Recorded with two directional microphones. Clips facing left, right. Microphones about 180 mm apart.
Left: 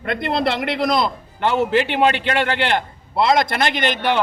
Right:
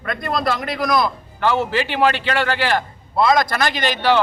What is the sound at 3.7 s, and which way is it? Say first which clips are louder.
Speech: left 1 dB; 55° left (ahead or behind).